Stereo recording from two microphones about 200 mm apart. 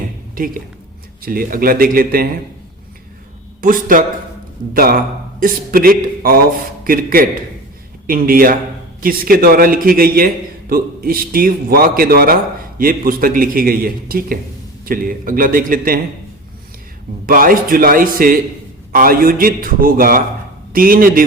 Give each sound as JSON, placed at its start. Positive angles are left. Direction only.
{"t": 0.3, "sound": "a woman's voice", "side_deg": -45}
{"t": 3.6, "sound": "a man's voice", "side_deg": -45}
{"t": 17.2, "sound": "a man's voice", "side_deg": -45}